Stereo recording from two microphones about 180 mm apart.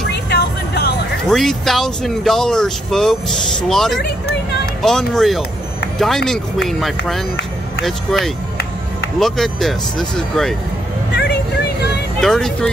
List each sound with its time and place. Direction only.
0.1 s vehicle: 65° left (ahead or behind)
1.3 s speech: centre (ahead or behind)
12.2 s speech: centre (ahead or behind)